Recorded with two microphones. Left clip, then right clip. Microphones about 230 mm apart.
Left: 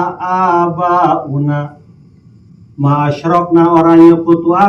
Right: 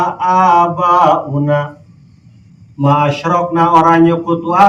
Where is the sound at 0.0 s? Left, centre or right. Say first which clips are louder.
Right 2 dB; right.